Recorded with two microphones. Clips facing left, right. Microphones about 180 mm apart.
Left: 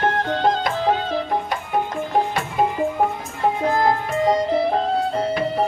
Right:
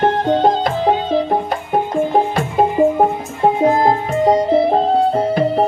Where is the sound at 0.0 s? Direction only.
25° right (ahead or behind).